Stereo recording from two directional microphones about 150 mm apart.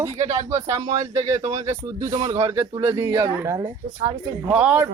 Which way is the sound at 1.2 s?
20° right (ahead or behind).